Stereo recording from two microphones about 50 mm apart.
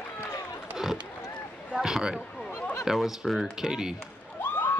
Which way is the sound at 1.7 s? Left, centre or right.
Centre.